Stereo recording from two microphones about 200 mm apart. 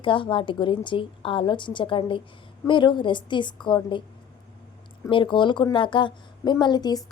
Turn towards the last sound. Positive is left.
turn(degrees=20)  # may be behind; listen again after turning